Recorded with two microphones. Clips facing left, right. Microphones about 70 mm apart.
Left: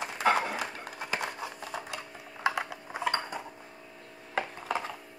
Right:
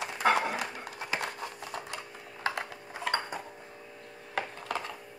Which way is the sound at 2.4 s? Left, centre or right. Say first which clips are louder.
Left 3 dB; centre.